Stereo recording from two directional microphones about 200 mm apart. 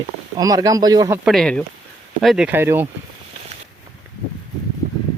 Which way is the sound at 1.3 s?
5° left (ahead or behind).